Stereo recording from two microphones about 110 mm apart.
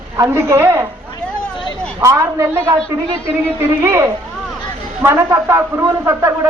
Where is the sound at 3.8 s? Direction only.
20° right (ahead or behind).